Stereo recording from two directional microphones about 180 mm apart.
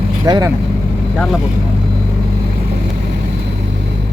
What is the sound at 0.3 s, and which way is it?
Speech, 20° right (ahead or behind).